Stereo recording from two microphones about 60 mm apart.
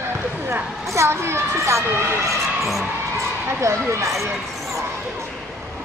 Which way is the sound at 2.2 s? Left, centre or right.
Centre.